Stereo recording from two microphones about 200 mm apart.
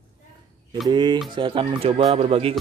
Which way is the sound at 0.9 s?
20° right (ahead or behind).